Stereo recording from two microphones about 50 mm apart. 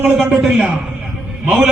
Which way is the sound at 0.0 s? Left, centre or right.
Right.